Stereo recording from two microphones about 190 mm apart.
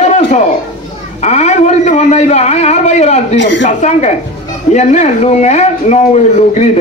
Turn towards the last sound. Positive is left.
turn(degrees=35)  # may be behind; listen again after turning